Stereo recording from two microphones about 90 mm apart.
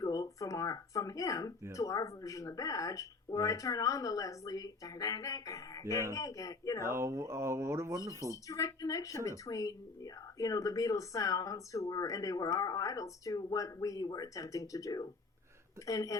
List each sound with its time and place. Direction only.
0.0 s speech: 45° left (ahead or behind)
6.9 s speech: 30° right (ahead or behind)
8.4 s speech: 40° left (ahead or behind)